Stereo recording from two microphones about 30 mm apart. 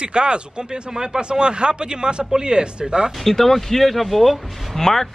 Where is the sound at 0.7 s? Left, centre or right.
Centre.